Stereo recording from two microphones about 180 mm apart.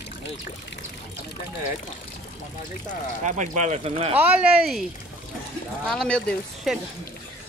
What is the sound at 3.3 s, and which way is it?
Speech, 45° right (ahead or behind).